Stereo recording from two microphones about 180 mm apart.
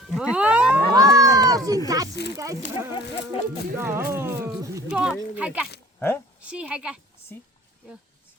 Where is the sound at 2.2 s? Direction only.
65° left (ahead or behind).